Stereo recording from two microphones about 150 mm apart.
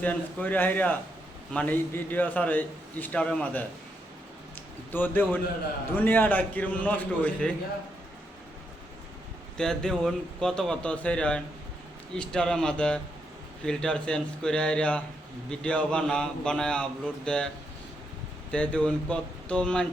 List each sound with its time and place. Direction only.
0.0 s a man's voice: 10° left (ahead or behind)
9.6 s a man's voice: 5° left (ahead or behind)
18.5 s a man's voice: 10° left (ahead or behind)